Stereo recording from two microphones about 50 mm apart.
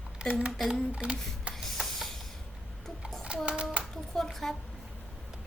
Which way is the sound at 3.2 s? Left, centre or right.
Right.